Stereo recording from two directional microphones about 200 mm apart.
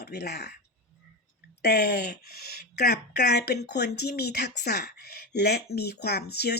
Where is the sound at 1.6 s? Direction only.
55° left (ahead or behind).